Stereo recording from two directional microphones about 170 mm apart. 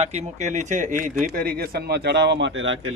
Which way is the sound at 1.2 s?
60° right (ahead or behind).